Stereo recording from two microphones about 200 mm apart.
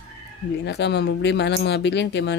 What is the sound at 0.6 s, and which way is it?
Speech, 60° left (ahead or behind).